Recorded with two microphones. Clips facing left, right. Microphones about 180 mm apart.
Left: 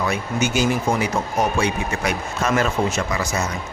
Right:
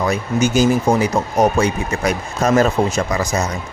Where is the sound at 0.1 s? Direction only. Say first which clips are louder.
Right 5 dB; 35° right (ahead or behind).